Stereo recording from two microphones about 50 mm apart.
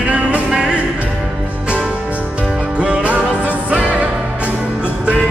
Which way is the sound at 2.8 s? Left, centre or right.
Right.